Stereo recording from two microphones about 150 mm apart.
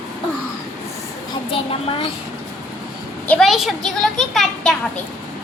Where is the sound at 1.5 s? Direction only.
35° left (ahead or behind).